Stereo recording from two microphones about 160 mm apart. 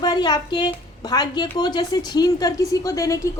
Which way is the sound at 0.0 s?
25° left (ahead or behind).